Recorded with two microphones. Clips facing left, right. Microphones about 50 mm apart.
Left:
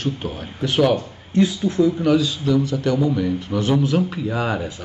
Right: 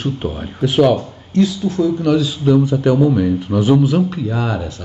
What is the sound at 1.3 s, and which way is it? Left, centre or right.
Speech, left.